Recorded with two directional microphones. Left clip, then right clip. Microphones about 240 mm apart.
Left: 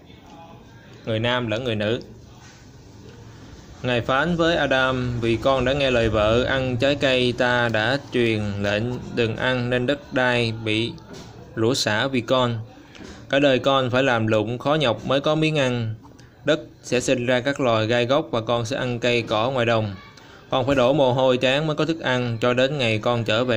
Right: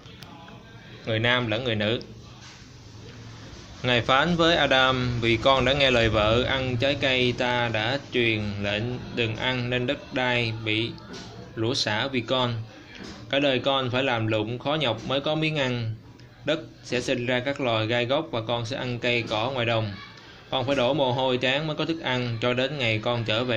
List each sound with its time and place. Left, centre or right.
1.0 s a man's voice: centre
3.8 s speech: centre